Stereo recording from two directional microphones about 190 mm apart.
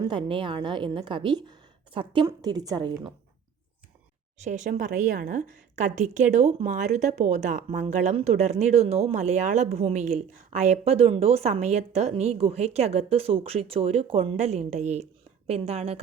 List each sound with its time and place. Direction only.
0.0 s a woman's voice: 25° right (ahead or behind)
4.4 s speech: 40° right (ahead or behind)